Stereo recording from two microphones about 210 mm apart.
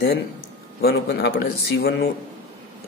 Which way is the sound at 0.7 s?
50° left (ahead or behind).